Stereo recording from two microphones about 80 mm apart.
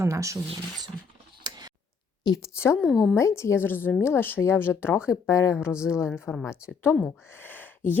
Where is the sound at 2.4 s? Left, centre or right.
Left.